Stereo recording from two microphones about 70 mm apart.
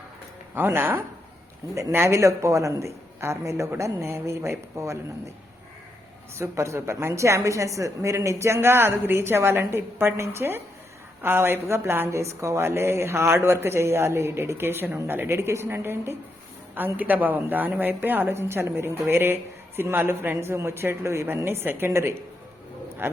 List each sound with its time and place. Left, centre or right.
0.5 s a woman's voice: right
6.4 s a woman's voice: right